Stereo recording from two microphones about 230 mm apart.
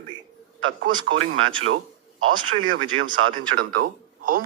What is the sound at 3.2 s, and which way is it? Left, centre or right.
Speech, right.